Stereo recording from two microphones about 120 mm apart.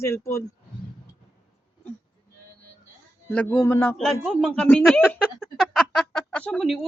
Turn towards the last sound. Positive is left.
turn(degrees=5)  # may be behind; listen again after turning